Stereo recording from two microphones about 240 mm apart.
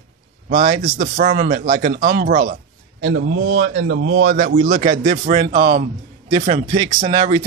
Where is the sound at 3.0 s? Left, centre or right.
Right.